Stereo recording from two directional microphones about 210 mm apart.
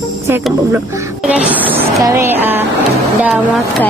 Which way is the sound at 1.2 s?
5° right (ahead or behind).